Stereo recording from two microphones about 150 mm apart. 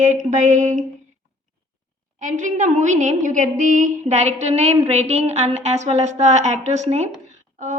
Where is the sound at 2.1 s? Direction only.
55° right (ahead or behind).